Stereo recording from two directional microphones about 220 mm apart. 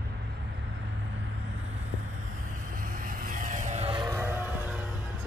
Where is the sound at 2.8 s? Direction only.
40° right (ahead or behind); by 4.8 s 10° right (ahead or behind).